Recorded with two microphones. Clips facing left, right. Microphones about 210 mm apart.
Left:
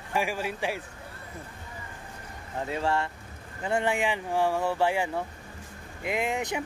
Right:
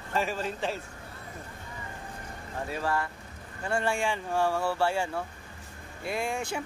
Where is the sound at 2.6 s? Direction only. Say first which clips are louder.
Left 3 dB; 25° left (ahead or behind).